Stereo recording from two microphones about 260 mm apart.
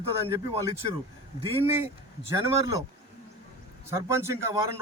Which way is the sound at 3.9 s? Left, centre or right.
Centre.